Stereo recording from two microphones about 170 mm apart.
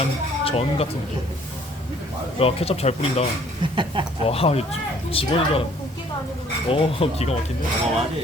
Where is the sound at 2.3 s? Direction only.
35° left (ahead or behind).